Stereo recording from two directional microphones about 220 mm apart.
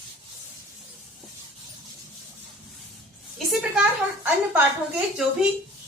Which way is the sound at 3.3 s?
Centre (ahead or behind).